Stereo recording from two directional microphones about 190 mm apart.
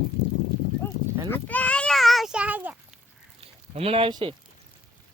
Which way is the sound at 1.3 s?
10° left (ahead or behind).